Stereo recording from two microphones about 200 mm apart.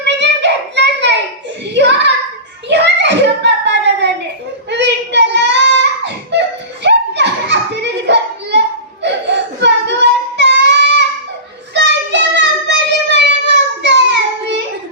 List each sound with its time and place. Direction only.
0.0 s child singing: 60° right (ahead or behind)
1.7 s a sound: 60° right (ahead or behind)
4.7 s child singing: 60° right (ahead or behind)
6.8 s children playing: 60° right (ahead or behind)
9.0 s child singing: 60° right (ahead or behind)
11.7 s a sound: 60° right (ahead or behind)